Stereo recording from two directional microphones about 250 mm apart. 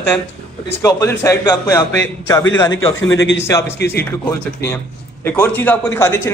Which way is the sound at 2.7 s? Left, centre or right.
Left.